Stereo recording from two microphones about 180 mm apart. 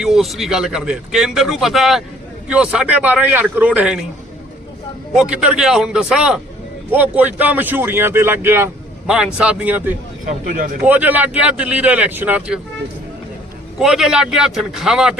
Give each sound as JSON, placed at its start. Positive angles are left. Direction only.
{"t": 0.0, "sound": "speech", "side_deg": 0}
{"t": 5.1, "sound": "speech", "side_deg": -5}
{"t": 10.2, "sound": "speech", "side_deg": -45}
{"t": 10.8, "sound": "speech", "side_deg": -10}
{"t": 13.7, "sound": "speech", "side_deg": -5}